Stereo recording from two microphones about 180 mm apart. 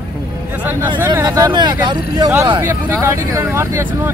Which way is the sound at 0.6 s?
10° right (ahead or behind).